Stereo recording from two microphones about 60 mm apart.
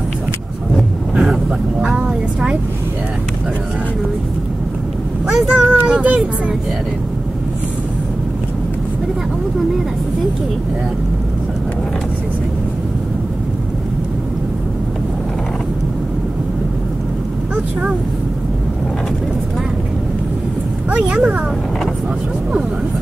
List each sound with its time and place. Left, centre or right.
1.1 s speech: centre
5.2 s speech: centre
20.9 s speech: centre